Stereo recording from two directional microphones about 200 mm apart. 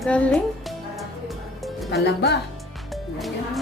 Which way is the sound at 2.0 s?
55° left (ahead or behind).